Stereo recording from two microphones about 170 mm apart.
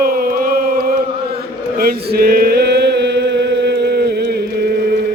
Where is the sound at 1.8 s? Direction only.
60° right (ahead or behind).